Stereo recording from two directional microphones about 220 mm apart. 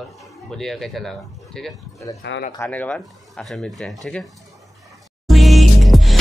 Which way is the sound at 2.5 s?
10° left (ahead or behind).